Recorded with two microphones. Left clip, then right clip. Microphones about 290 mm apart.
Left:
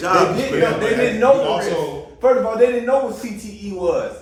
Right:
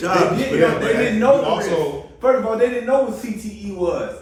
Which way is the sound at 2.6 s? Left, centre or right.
Left.